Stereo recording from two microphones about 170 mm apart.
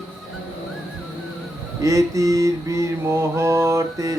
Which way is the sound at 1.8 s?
20° right (ahead or behind).